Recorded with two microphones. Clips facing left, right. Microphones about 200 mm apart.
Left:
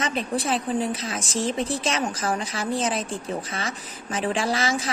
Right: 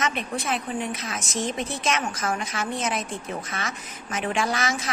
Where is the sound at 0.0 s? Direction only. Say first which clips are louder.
Left 2 dB; 30° left (ahead or behind).